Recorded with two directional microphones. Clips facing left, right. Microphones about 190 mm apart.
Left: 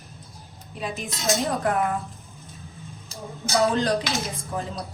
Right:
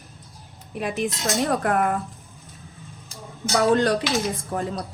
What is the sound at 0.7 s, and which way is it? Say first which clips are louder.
A woman's voice: right 6 dB; 60° right (ahead or behind).